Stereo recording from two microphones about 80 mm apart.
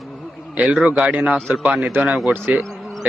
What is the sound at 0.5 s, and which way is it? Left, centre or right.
A man's voice, centre.